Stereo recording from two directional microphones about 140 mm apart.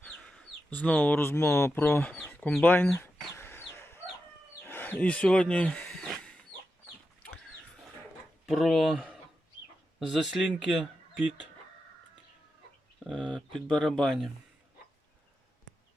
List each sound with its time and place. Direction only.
0.0 s speech: 5° left (ahead or behind)
2.6 s chicken: 15° left (ahead or behind)
4.6 s a sound: 15° left (ahead or behind)
8.4 s speech: centre (ahead or behind)
13.3 s speech: 5° left (ahead or behind)